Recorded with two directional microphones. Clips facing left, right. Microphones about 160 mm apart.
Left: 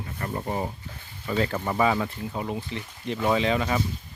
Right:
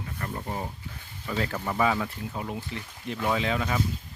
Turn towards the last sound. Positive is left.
turn(degrees=5)  # may be behind; listen again after turning